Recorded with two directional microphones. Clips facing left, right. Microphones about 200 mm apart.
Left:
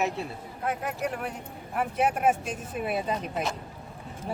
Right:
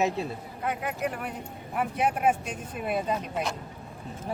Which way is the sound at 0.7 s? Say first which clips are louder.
Even; centre (ahead or behind).